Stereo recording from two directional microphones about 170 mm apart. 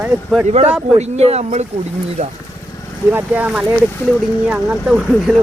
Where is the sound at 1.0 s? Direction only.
40° right (ahead or behind).